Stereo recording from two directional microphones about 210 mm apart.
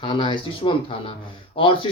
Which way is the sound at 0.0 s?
25° left (ahead or behind).